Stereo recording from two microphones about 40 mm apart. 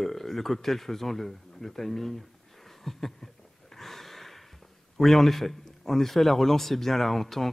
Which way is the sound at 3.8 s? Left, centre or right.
Centre.